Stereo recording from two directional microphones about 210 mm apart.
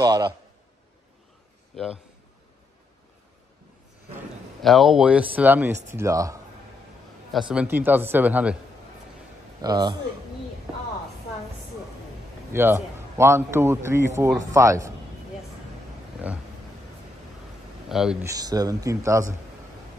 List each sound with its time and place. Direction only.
0.0 s a man's voice: 20° right (ahead or behind)
4.6 s a man's voice: centre (ahead or behind); by 6.4 s 15° right (ahead or behind)
7.3 s a man's voice: 5° right (ahead or behind)
9.6 s a man's voice: 20° right (ahead or behind)
12.5 s a man's voice: 10° right (ahead or behind)
17.8 s speech: centre (ahead or behind)
18.2 s a man's voice: 15° right (ahead or behind)